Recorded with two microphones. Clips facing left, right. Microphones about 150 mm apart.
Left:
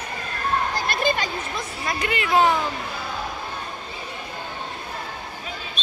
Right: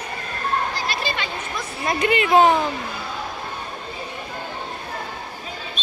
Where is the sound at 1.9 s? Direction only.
20° right (ahead or behind).